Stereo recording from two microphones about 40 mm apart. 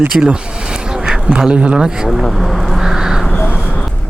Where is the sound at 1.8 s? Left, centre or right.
Centre.